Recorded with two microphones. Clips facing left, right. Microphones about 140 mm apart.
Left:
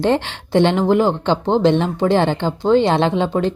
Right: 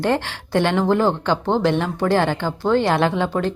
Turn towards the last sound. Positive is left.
turn(degrees=20)  # may be behind; listen again after turning